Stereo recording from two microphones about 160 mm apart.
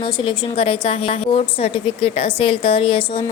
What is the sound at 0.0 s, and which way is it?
A woman's voice, 35° left (ahead or behind).